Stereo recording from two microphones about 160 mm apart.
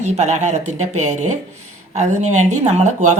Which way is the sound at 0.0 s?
45° right (ahead or behind).